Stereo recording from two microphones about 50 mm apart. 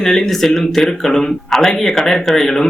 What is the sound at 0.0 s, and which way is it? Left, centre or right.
Speech, centre.